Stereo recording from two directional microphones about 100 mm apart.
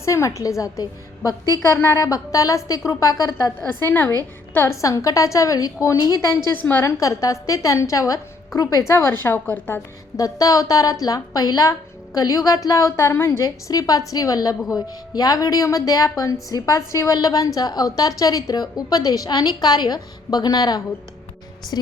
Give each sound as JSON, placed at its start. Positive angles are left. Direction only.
{"t": 0.0, "sound": "a woman's voice", "side_deg": 30}
{"t": 1.7, "sound": "a woman's voice", "side_deg": 25}
{"t": 3.8, "sound": "a woman's voice", "side_deg": 20}
{"t": 6.5, "sound": "a woman's voice", "side_deg": 20}
{"t": 6.9, "sound": "a woman's voice", "side_deg": 30}
{"t": 10.2, "sound": "a woman's voice", "side_deg": 35}
{"t": 13.1, "sound": "a woman's voice", "side_deg": 25}
{"t": 13.4, "sound": "a woman's voice", "side_deg": 35}